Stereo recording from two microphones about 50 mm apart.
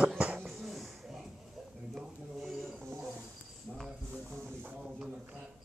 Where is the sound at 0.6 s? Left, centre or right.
Centre.